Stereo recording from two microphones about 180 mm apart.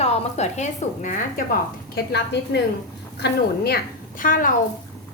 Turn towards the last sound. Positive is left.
turn(degrees=50)  # may be behind; listen again after turning